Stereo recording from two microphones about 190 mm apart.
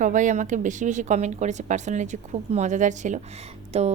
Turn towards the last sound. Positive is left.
turn(degrees=-35)  # may be behind; listen again after turning